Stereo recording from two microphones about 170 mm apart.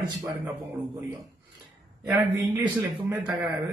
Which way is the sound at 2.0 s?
15° right (ahead or behind).